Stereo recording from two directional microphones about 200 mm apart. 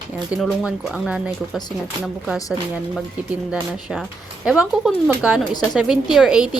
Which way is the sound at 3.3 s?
5° right (ahead or behind).